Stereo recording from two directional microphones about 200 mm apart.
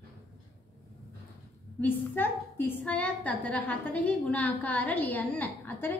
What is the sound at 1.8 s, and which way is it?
A woman's voice, 10° left (ahead or behind).